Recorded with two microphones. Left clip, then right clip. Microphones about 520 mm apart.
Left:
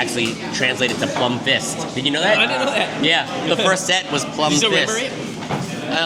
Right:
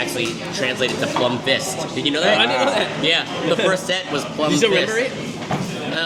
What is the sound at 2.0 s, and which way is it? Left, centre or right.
Speech, left.